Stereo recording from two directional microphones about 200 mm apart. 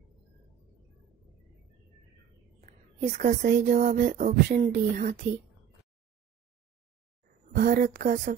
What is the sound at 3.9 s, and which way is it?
A woman's voice, 50° right (ahead or behind).